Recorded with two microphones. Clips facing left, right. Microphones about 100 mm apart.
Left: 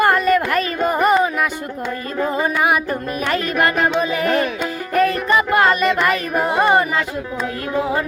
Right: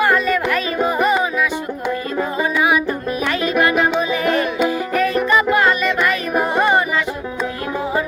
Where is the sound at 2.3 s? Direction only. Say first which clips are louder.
Right 1 dB; 50° left (ahead or behind).